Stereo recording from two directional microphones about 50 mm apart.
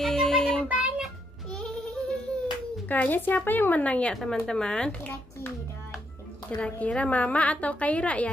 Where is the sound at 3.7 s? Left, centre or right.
Left.